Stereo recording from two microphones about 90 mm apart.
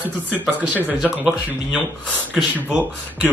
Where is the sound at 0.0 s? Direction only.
20° right (ahead or behind).